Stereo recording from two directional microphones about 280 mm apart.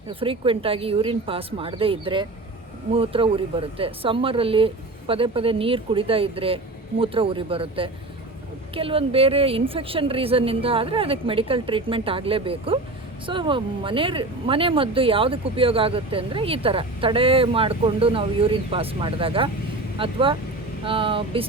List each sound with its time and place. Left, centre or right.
0.1 s speech: centre